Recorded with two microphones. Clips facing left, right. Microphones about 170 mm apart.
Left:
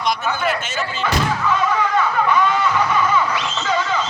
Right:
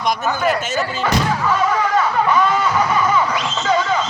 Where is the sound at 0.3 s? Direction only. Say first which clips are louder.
Right 3 dB; 40° right (ahead or behind).